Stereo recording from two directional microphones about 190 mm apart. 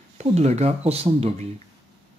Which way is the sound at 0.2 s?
35° right (ahead or behind).